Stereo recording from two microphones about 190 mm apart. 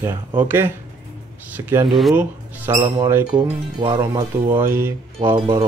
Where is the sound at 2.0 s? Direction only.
Centre (ahead or behind).